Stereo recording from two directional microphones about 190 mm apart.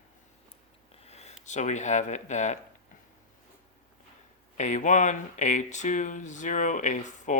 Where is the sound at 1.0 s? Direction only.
35° left (ahead or behind).